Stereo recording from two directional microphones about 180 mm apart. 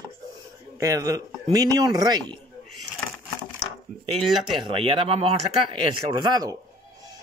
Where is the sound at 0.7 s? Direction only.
20° right (ahead or behind).